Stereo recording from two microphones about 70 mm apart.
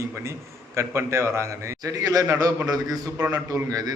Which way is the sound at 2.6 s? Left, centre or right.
Right.